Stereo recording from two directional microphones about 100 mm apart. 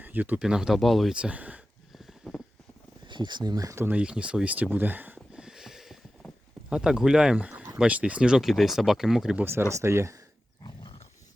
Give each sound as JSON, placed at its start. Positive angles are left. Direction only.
{"t": 0.0, "sound": "speech", "side_deg": -15}
{"t": 0.4, "sound": "speech", "side_deg": -5}
{"t": 1.1, "sound": "speech", "side_deg": -10}
{"t": 2.0, "sound": "a sound", "side_deg": 0}
{"t": 3.1, "sound": "speech", "side_deg": -50}
{"t": 3.8, "sound": "a sound", "side_deg": -10}
{"t": 7.8, "sound": "speech", "side_deg": -15}
{"t": 9.4, "sound": "speech", "side_deg": -25}